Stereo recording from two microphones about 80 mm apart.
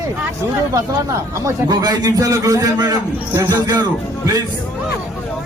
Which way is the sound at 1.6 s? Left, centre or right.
Right.